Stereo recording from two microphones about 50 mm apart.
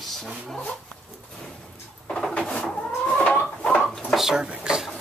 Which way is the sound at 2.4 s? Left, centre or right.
Centre.